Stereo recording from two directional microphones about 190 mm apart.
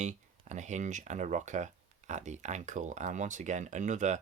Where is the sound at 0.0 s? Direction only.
40° right (ahead or behind).